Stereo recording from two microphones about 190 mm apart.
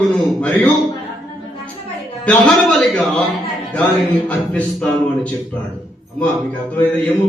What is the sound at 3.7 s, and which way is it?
Speech, 5° left (ahead or behind).